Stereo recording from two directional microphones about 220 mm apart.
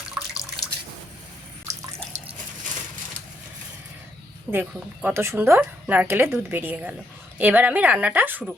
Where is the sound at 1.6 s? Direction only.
15° right (ahead or behind).